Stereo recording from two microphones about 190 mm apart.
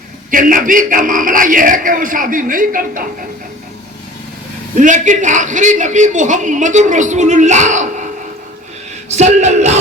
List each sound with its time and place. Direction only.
0.3 s a man's voice: 45° right (ahead or behind)
4.8 s a man's voice: 40° right (ahead or behind)
9.0 s a man's voice: 35° right (ahead or behind)